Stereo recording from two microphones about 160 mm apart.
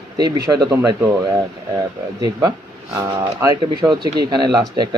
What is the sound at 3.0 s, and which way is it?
Speech, 20° right (ahead or behind).